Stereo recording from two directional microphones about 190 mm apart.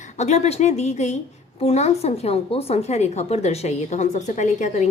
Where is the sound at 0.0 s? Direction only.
35° left (ahead or behind).